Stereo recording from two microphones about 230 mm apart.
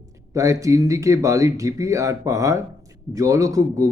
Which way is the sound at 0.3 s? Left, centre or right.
Centre.